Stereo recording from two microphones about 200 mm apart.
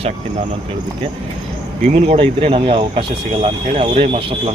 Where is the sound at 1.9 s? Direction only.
30° right (ahead or behind).